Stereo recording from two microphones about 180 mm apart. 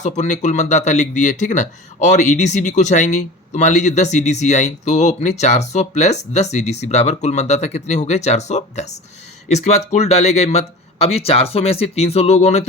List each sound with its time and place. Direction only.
0.0 s speech: 40° left (ahead or behind)